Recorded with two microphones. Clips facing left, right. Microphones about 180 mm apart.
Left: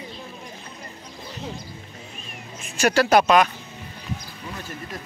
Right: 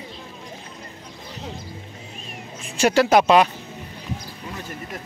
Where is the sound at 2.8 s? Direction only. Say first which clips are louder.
Right 1 dB; 25° right (ahead or behind).